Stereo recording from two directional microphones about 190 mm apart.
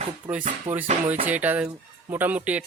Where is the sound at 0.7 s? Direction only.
40° right (ahead or behind).